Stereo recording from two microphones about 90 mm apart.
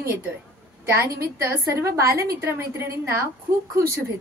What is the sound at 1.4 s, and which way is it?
A woman's voice, 35° right (ahead or behind).